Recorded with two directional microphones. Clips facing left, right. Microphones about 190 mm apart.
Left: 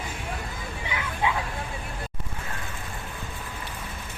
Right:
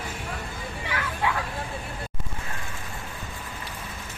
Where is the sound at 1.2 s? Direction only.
20° left (ahead or behind).